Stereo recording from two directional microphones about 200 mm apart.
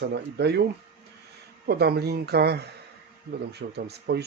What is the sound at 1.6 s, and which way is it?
Speech, 55° right (ahead or behind).